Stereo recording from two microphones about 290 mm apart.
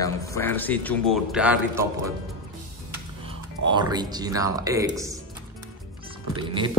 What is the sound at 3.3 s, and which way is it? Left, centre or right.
Speech, centre.